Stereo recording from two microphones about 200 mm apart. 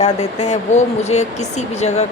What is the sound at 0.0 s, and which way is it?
A woman's voice, 35° left (ahead or behind).